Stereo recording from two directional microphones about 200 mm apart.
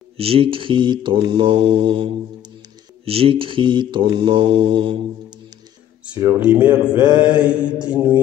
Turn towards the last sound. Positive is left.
turn(degrees=-5)  # may be behind; listen again after turning